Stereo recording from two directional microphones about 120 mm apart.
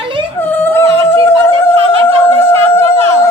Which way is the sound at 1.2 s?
20° left (ahead or behind).